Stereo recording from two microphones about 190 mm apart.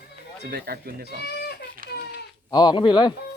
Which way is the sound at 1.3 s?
55° left (ahead or behind).